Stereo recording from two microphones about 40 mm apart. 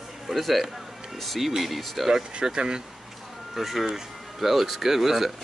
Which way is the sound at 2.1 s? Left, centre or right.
Centre.